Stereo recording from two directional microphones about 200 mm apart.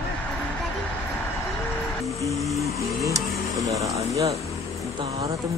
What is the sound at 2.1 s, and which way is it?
Music, 15° left (ahead or behind).